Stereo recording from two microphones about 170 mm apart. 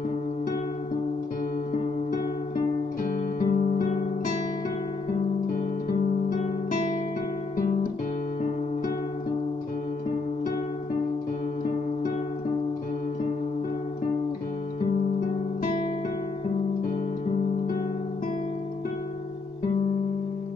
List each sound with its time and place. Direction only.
3.1 s music: 50° left (ahead or behind)
6.3 s guitar: 50° left (ahead or behind)